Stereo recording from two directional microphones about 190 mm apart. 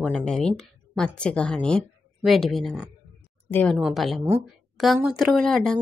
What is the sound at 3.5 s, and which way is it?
Speech, 10° left (ahead or behind).